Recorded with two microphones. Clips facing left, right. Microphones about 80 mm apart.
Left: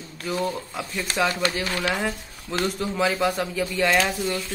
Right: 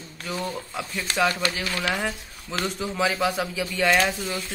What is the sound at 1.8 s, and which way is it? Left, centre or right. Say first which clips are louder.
Speech: left 1 dB; centre.